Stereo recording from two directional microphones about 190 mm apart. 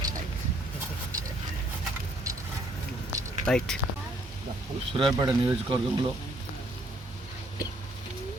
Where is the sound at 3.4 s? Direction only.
5° left (ahead or behind).